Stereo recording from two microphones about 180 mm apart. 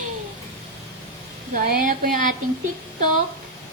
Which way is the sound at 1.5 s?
50° right (ahead or behind).